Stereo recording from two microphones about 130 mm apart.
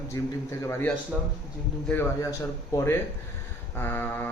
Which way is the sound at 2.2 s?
25° left (ahead or behind).